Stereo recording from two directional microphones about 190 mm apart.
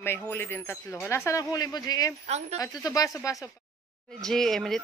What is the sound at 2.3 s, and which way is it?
Speech, 35° right (ahead or behind).